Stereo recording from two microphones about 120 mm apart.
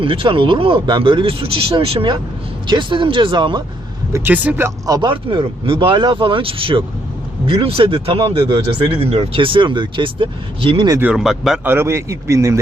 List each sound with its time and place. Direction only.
0.0 s speech: 50° right (ahead or behind)
4.1 s a man's voice: 15° right (ahead or behind)
4.9 s speech: 40° right (ahead or behind)
11.0 s speech: 5° right (ahead or behind)
11.6 s a man's voice: 20° right (ahead or behind)